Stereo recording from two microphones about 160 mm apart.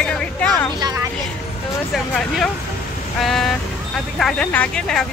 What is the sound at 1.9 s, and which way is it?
Speech, centre (ahead or behind).